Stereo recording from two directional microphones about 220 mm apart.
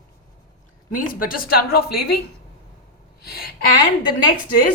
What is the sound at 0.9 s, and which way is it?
A woman's voice, 40° left (ahead or behind).